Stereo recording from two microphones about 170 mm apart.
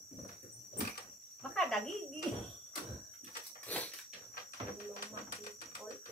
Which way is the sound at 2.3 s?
5° left (ahead or behind).